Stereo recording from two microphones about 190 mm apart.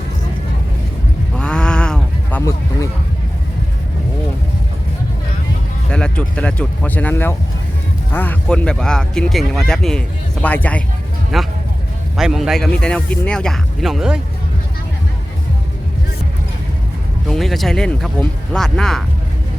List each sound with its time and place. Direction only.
1.4 s sheep: 5° left (ahead or behind)
2.4 s a sound: 15° left (ahead or behind)
5.9 s speech: 5° left (ahead or behind)
17.2 s speech: centre (ahead or behind)